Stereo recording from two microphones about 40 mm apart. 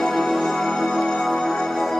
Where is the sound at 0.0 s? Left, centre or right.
Centre.